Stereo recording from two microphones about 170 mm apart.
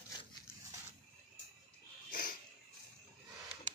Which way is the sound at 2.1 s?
55° left (ahead or behind).